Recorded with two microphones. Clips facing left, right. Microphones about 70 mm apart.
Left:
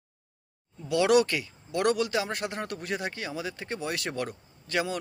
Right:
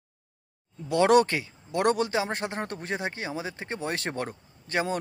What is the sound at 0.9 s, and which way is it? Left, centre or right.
Speech, right.